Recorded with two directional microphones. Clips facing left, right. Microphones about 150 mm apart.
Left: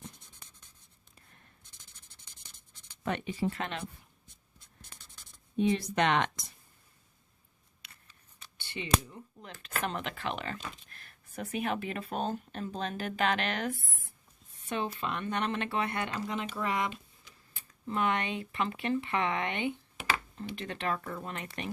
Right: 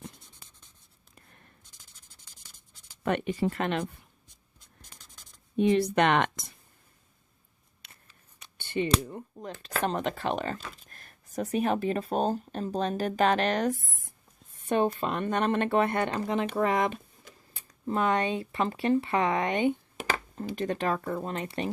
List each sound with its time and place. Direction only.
3.0 s speech: 60° right (ahead or behind)
5.5 s speech: 60° right (ahead or behind)
8.5 s speech: 50° right (ahead or behind)
9.6 s speech: 35° right (ahead or behind)